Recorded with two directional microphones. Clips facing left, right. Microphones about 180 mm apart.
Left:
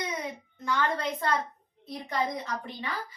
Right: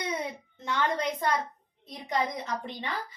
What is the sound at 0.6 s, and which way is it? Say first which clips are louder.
Speech: even; 20° right (ahead or behind).